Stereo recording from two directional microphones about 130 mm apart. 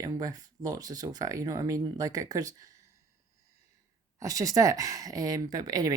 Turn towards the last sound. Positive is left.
turn(degrees=-30)  # may be behind; listen again after turning